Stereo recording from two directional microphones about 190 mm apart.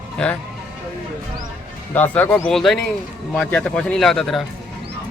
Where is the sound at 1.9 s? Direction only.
10° left (ahead or behind).